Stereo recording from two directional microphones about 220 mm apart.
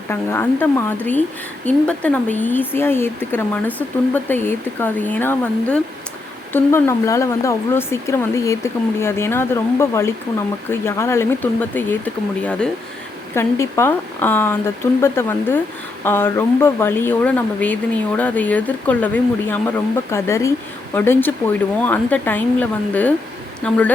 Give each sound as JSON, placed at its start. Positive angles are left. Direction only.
{"t": 0.1, "sound": "speech", "side_deg": 10}
{"t": 23.6, "sound": "speech", "side_deg": 5}